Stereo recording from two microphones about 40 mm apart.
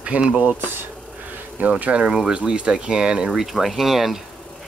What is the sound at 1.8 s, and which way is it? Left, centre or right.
Speech, right.